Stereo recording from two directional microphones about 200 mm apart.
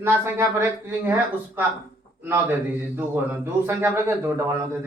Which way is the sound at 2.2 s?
10° right (ahead or behind).